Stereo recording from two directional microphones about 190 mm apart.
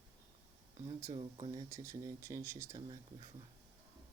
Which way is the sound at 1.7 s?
15° right (ahead or behind).